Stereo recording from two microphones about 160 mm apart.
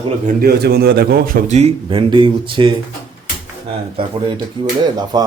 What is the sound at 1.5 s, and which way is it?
Speech, 40° right (ahead or behind).